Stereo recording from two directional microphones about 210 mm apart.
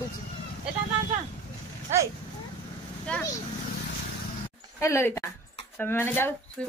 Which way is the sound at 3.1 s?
5° left (ahead or behind).